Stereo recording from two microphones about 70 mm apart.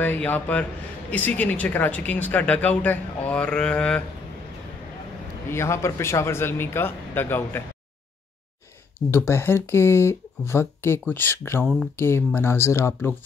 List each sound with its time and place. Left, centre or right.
0.0 s speech: left
5.5 s speech: left
9.1 s speech: left
11.6 s speech: centre
12.0 s speech: left